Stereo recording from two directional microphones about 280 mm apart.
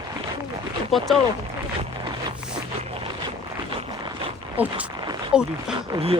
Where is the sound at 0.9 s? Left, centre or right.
Centre.